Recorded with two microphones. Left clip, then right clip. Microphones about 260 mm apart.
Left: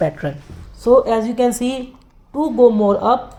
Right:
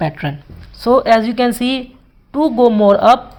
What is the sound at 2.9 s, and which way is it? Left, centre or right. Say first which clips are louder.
Speech: right 7 dB; right.